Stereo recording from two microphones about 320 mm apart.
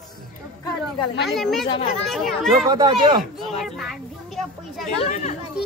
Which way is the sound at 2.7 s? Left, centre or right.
Centre.